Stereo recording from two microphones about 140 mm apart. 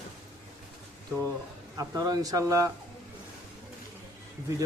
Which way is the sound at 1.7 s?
25° right (ahead or behind).